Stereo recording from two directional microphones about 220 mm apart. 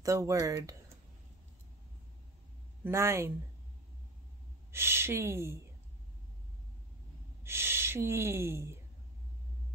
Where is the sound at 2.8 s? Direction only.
10° right (ahead or behind).